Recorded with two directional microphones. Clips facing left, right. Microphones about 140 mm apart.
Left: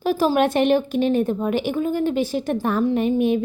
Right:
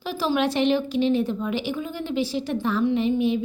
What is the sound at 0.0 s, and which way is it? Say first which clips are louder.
Speech: left 5 dB; 50° left (ahead or behind).